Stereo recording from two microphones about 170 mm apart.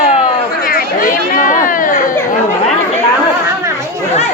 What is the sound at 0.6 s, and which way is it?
Speech, 55° left (ahead or behind).